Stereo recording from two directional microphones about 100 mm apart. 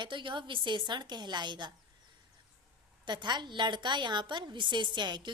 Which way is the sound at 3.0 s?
50° right (ahead or behind).